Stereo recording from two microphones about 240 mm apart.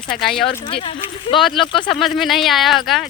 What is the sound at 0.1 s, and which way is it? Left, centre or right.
Speech, left.